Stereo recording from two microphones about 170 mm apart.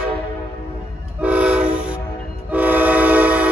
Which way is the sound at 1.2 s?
10° right (ahead or behind).